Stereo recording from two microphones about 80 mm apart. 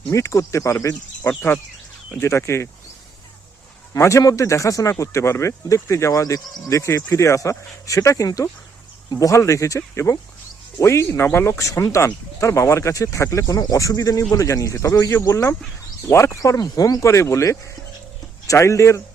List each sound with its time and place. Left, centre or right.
0.1 s speech: left
3.9 s speech: left
16.6 s speech: left